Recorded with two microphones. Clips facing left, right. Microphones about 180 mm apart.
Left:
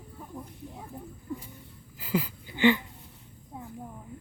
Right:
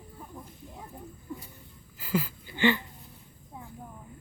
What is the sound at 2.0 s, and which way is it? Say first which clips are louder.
Speech: even; 15° left (ahead or behind).